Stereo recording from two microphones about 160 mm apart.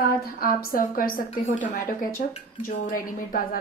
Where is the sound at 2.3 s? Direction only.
50° left (ahead or behind).